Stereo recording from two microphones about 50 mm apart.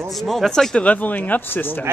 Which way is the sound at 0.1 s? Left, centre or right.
Centre.